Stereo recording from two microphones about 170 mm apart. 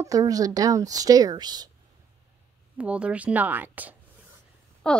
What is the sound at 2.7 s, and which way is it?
Speech, 5° right (ahead or behind).